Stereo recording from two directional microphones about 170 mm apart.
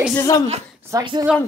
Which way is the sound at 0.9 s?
20° right (ahead or behind).